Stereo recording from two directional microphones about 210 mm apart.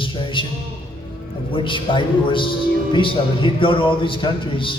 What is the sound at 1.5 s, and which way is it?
A man's voice, 25° left (ahead or behind).